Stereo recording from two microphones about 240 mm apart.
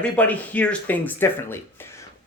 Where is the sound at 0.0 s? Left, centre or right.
Centre.